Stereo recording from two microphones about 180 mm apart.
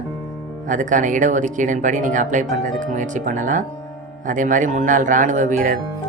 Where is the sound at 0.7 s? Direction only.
45° right (ahead or behind).